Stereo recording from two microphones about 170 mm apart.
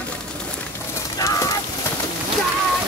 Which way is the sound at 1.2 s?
20° left (ahead or behind).